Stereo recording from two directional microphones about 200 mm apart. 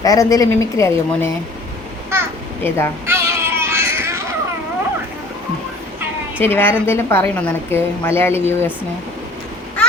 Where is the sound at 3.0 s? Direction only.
15° right (ahead or behind).